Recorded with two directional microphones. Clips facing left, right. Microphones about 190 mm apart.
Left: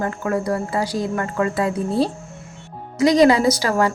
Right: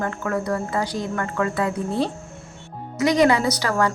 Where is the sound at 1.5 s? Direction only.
10° left (ahead or behind).